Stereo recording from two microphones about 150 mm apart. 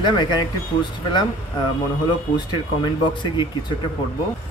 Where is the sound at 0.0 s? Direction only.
30° left (ahead or behind).